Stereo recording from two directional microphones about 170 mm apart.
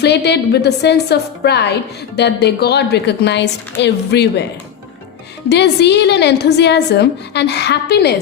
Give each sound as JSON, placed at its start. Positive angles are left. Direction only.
{"t": 0.0, "sound": "a woman's voice", "side_deg": 85}
{"t": 5.5, "sound": "a woman's voice", "side_deg": 85}